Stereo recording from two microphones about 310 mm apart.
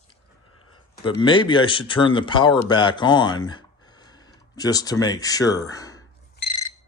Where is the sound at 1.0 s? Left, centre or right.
Centre.